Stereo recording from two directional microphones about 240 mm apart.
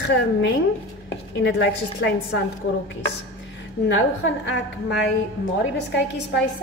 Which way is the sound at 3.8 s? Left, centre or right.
Left.